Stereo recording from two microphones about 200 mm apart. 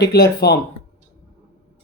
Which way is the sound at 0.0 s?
55° left (ahead or behind).